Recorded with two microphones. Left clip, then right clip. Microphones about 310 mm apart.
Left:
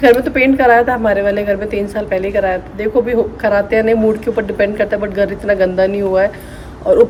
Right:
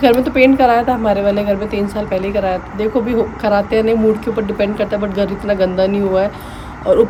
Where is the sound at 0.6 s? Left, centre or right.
Centre.